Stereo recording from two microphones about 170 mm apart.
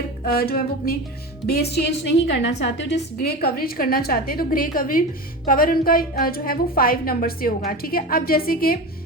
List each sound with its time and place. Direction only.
0.3 s a woman's voice: 65° left (ahead or behind)